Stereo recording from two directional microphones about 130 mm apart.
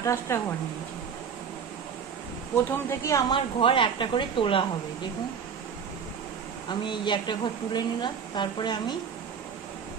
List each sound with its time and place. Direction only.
0.0 s speech: 20° left (ahead or behind)
2.5 s speech: 20° left (ahead or behind)
3.3 s speech: 40° left (ahead or behind)
6.7 s speech: 35° left (ahead or behind)